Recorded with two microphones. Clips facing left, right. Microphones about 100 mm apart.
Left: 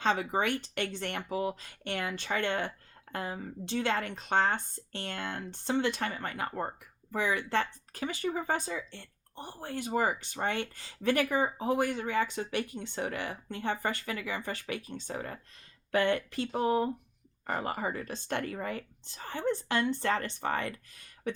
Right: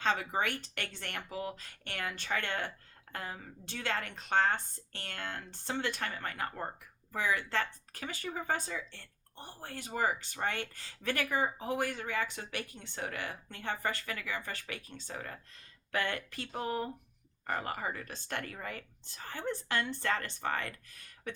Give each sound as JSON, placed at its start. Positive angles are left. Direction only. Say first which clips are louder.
{"t": 0.0, "sound": "speech", "louder": "left 3 dB", "side_deg": 25}
{"t": 17.4, "sound": "speech", "louder": "left 3 dB", "side_deg": 25}